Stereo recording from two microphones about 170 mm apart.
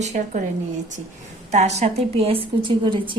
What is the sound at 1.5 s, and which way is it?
A woman's voice, 40° right (ahead or behind).